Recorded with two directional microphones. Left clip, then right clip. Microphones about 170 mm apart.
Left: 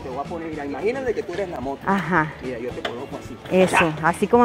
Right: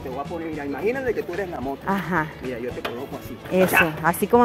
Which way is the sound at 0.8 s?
10° right (ahead or behind).